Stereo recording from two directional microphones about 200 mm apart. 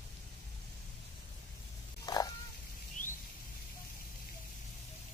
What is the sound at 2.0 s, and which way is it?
Frog, 20° left (ahead or behind).